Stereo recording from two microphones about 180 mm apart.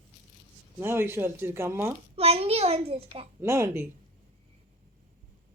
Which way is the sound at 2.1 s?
35° right (ahead or behind).